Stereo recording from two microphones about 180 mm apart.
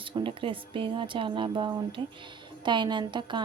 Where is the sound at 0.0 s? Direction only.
30° right (ahead or behind).